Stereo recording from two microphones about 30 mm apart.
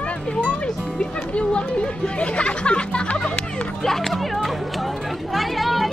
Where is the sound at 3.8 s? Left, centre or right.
Centre.